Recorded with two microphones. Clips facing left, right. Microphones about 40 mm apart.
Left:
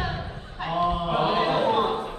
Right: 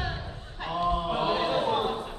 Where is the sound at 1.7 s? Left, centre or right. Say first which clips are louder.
Left 4 dB; centre.